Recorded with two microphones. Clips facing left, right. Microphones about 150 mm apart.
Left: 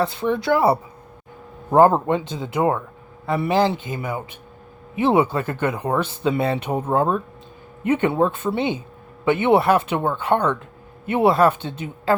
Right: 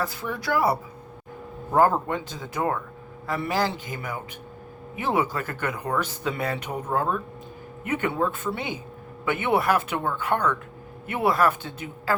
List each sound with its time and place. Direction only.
0.0 s speech: 25° left (ahead or behind)